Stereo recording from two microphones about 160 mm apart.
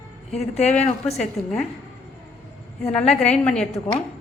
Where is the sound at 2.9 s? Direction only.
5° left (ahead or behind).